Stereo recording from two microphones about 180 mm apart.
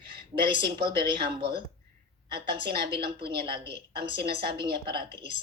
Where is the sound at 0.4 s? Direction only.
30° right (ahead or behind).